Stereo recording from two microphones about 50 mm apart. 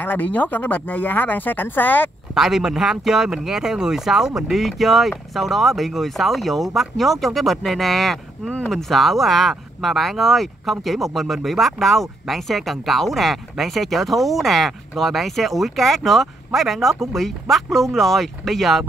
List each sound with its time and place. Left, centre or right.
0.0 s speech: left
2.3 s speech: centre